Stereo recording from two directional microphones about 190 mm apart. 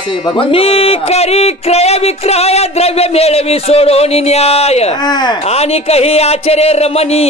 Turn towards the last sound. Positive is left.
turn(degrees=35)  # may be behind; listen again after turning